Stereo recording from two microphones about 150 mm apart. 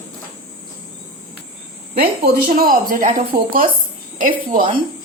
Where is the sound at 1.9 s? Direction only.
80° right; by 4.6 s 60° right (ahead or behind).